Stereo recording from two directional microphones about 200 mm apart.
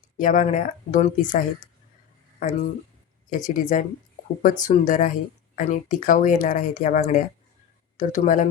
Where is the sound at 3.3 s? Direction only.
40° left (ahead or behind).